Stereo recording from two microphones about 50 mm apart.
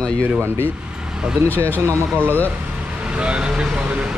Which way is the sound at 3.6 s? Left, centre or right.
Right.